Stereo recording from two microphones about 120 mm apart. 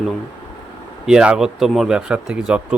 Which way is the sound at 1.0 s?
5° right (ahead or behind).